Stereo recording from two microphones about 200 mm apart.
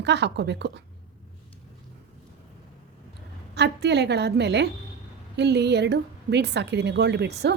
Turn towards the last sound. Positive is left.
turn(degrees=-55)  # may be behind; listen again after turning